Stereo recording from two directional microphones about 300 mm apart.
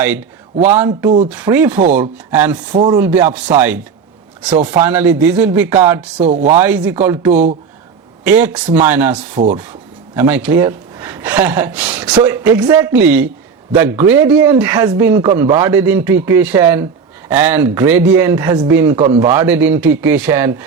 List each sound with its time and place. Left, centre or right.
0.0 s speech: centre
1.7 s chopping: right
2.0 s speech: centre
6.2 s chopping: right
6.6 s speech: centre